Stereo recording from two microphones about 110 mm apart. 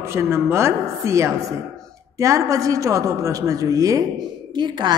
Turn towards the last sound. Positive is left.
turn(degrees=-40)  # may be behind; listen again after turning